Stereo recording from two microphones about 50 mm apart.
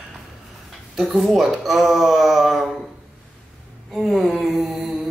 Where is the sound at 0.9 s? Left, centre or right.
Centre.